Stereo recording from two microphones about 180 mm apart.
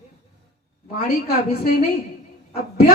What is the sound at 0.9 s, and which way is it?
Speech, 60° left (ahead or behind).